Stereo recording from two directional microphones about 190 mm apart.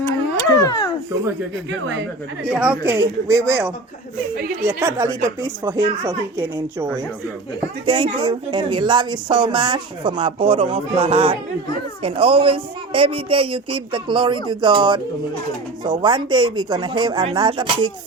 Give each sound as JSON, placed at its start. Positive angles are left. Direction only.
{"t": 0.6, "sound": "a sound", "side_deg": 20}
{"t": 2.4, "sound": "speech", "side_deg": -5}
{"t": 7.9, "sound": "speech", "side_deg": -25}